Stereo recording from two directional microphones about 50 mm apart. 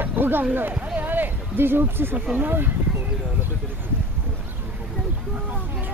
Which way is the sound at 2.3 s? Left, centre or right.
Right.